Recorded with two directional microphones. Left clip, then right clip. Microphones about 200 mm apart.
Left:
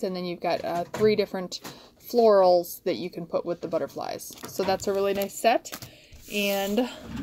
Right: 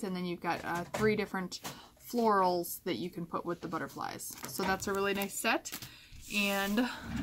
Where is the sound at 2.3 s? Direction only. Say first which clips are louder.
Left 9 dB; 15° left (ahead or behind).